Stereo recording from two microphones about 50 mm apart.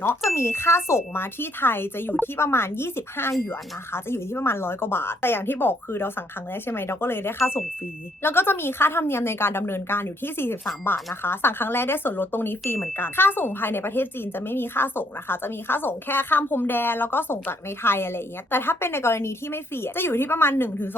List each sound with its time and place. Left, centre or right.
0.3 s speech: left